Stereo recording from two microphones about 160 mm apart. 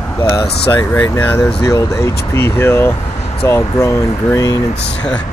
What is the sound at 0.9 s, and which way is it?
Speech, 15° left (ahead or behind).